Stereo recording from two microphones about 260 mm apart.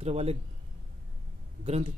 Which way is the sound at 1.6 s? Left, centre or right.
Right.